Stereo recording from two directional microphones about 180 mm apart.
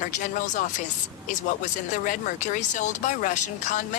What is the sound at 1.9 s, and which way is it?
Speech, 45° left (ahead or behind).